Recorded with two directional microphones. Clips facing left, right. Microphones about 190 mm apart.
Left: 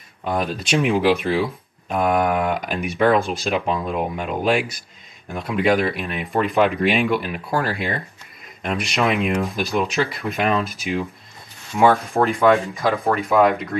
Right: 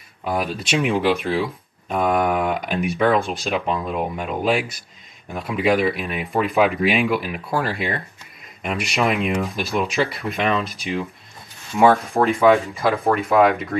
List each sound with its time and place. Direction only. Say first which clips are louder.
0.2 s speech: even; 5° right (ahead or behind)